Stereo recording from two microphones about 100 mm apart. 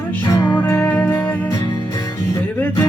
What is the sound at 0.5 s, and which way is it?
Music, 25° left (ahead or behind).